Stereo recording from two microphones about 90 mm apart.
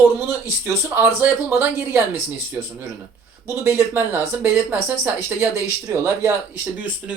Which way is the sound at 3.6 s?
25° right (ahead or behind).